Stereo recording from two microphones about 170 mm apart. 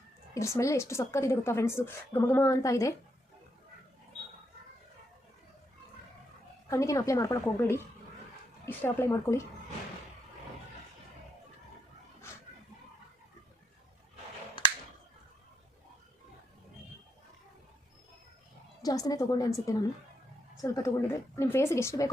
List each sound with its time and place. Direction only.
0.3 s a woman's voice: 15° left (ahead or behind)
6.7 s a woman's voice: 20° left (ahead or behind)
14.6 s finger snapping: 30° left (ahead or behind)
18.8 s a woman's voice: 20° left (ahead or behind)